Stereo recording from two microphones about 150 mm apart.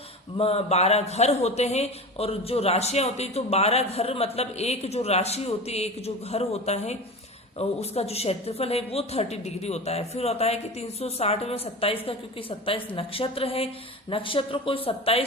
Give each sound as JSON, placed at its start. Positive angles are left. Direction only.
{"t": 0.3, "sound": "speech", "side_deg": 40}